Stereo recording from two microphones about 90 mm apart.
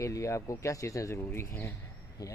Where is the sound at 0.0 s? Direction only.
35° left (ahead or behind).